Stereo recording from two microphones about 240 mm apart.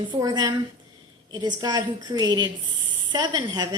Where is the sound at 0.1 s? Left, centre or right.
Centre.